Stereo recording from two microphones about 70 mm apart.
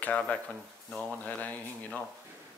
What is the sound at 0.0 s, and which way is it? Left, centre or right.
Speech, centre.